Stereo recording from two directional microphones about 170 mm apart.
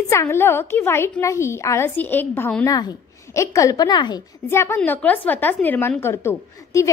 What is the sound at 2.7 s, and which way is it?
A woman's voice, 20° left (ahead or behind).